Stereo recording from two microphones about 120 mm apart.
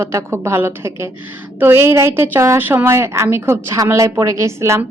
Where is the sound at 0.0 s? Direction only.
25° right (ahead or behind).